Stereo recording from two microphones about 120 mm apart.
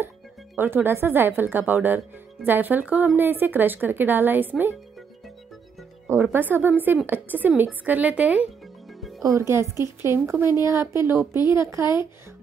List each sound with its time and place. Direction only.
0.6 s speech: 15° right (ahead or behind)
6.3 s speech: 20° right (ahead or behind)
9.2 s a woman's voice: 25° right (ahead or behind)